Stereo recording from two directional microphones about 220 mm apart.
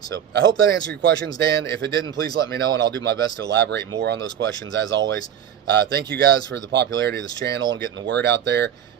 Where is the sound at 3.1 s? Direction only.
50° right (ahead or behind).